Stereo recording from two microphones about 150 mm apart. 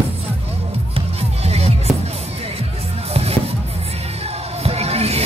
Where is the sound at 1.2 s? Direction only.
45° right (ahead or behind).